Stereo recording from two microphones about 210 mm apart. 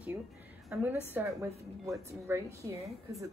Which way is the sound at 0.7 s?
5° right (ahead or behind).